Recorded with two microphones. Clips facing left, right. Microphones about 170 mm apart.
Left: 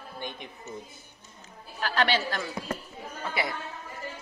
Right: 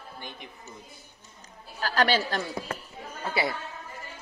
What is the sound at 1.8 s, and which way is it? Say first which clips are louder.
Speech: right 2 dB; 40° right (ahead or behind).